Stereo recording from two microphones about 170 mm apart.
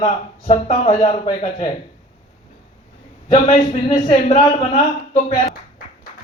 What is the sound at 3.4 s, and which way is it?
Speech, 35° left (ahead or behind).